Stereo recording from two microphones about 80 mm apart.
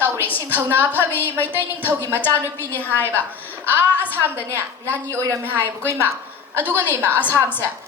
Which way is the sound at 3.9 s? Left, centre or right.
Left.